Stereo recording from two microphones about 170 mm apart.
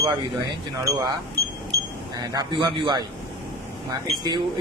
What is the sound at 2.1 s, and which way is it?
Speech, 25° right (ahead or behind).